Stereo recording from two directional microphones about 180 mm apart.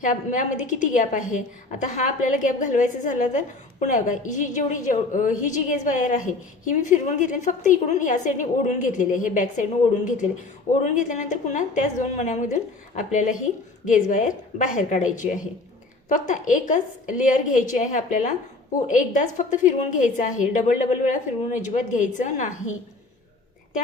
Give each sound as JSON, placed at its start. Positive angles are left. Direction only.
{"t": 0.0, "sound": "a woman's voice", "side_deg": 45}
{"t": 13.8, "sound": "a woman's voice", "side_deg": 45}